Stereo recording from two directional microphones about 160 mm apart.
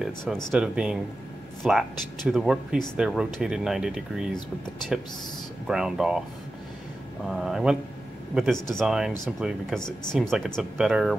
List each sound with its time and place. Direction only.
0.0 s speech: centre (ahead or behind)
7.2 s speech: centre (ahead or behind)